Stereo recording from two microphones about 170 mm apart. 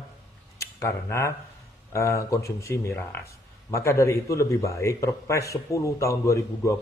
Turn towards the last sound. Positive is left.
turn(degrees=20)  # may be behind; listen again after turning